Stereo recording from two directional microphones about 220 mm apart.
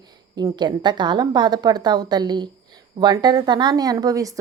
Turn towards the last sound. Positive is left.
turn(degrees=-15)  # may be behind; listen again after turning